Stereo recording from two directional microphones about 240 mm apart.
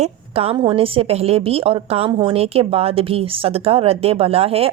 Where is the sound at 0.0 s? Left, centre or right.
Right.